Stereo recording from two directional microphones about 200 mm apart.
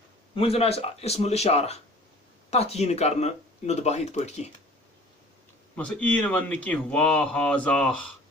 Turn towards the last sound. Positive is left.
turn(degrees=5)  # may be behind; listen again after turning